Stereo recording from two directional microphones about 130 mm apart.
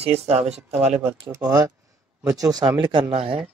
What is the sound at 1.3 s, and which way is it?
Speech, 30° right (ahead or behind).